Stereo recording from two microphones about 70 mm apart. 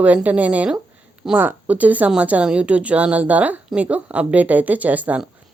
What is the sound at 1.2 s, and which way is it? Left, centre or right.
Speech, centre.